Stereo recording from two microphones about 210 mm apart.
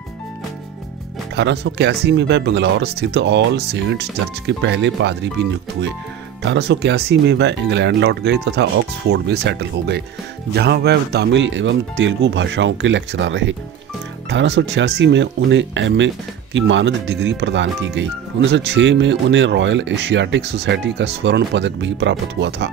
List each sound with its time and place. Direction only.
1.3 s speech: 55° right (ahead or behind)
6.4 s speech: 55° right (ahead or behind)